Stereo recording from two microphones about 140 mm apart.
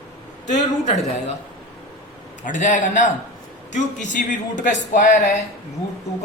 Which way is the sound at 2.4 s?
65° left (ahead or behind).